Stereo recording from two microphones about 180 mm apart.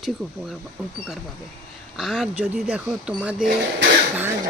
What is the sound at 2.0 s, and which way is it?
Speech, centre (ahead or behind).